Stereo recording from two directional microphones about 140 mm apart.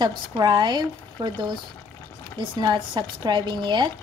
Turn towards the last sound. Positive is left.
turn(degrees=-35)  # may be behind; listen again after turning